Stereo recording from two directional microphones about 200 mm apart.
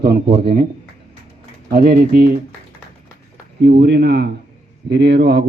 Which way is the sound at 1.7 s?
55° right (ahead or behind).